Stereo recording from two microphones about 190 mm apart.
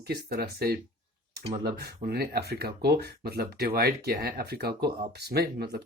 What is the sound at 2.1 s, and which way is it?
Speech, 55° right (ahead or behind).